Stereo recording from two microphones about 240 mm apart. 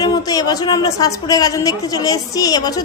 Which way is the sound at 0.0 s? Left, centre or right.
Centre.